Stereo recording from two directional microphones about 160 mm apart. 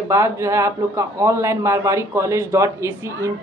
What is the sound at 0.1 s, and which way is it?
A man's voice, 20° right (ahead or behind).